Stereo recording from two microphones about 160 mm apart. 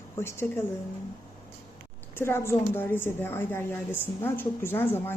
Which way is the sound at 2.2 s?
15° left (ahead or behind).